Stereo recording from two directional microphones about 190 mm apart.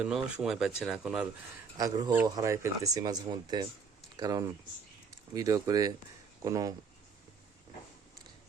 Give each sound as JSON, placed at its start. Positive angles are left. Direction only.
{"t": 0.3, "sound": "speech", "side_deg": -5}
{"t": 1.8, "sound": "speech", "side_deg": -20}